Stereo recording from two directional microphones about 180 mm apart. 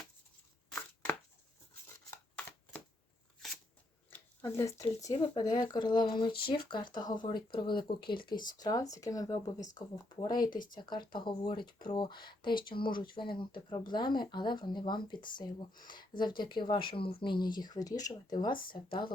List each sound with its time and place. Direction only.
4.1 s speech: 15° left (ahead or behind)
18.5 s speech: 50° left (ahead or behind)
18.9 s speech: 25° left (ahead or behind)